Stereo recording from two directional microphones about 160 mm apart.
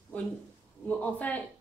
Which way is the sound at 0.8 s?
10° left (ahead or behind).